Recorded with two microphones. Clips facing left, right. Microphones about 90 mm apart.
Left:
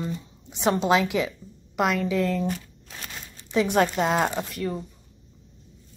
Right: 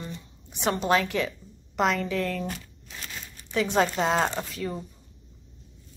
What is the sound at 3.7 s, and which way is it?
A woman's voice, 5° left (ahead or behind).